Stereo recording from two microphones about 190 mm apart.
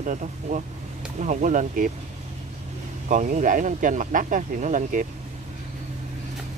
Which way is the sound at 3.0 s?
40° right (ahead or behind).